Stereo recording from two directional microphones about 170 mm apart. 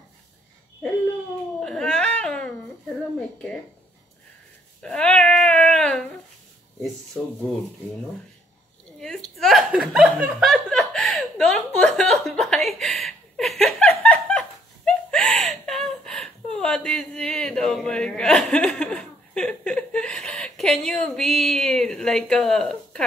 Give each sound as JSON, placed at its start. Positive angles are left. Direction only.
{"t": 1.6, "sound": "baby cry", "side_deg": 5}
{"t": 4.8, "sound": "baby cry", "side_deg": 5}
{"t": 9.0, "sound": "chuckle", "side_deg": 0}
{"t": 14.9, "sound": "a sound", "side_deg": 5}